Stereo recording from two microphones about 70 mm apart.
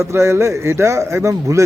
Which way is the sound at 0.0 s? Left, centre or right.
Right.